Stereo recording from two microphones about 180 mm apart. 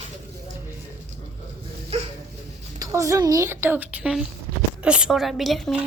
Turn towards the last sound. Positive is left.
turn(degrees=0)  # may be behind; listen again after turning